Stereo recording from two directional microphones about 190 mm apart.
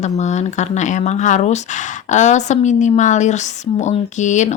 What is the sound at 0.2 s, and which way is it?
Speech, 40° left (ahead or behind).